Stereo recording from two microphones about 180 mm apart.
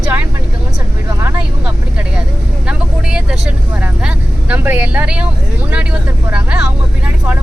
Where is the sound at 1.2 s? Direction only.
10° right (ahead or behind).